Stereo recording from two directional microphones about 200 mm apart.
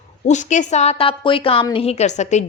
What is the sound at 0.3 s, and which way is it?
Speech, 35° left (ahead or behind).